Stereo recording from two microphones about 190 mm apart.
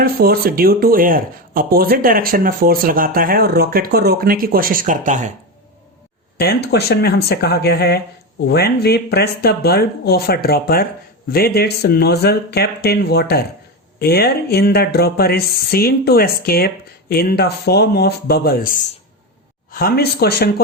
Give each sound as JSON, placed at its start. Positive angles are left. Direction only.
{"t": 0.0, "sound": "speech", "side_deg": -50}
{"t": 6.4, "sound": "speech", "side_deg": 55}